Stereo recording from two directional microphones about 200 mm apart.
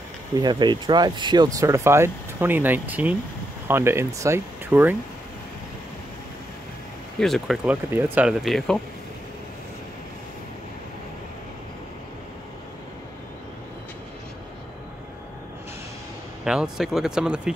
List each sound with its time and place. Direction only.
0.3 s speech: 20° right (ahead or behind)
7.2 s speech: centre (ahead or behind)
16.4 s speech: 5° right (ahead or behind)